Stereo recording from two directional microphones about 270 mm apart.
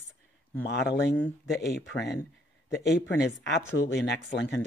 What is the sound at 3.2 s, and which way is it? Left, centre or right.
Speech, left.